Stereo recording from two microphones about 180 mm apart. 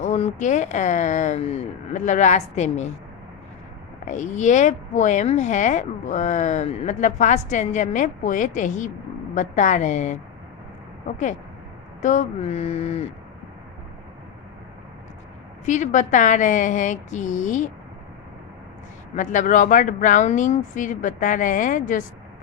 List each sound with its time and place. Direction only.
0.0 s speech: 40° left (ahead or behind)
4.0 s speech: 45° left (ahead or behind)
12.0 s speech: 45° left (ahead or behind)
15.6 s speech: 40° left (ahead or behind)
19.1 s speech: 45° left (ahead or behind)